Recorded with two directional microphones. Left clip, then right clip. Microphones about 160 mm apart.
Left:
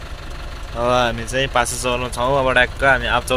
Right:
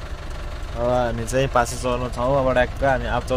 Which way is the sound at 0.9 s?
15° right (ahead or behind).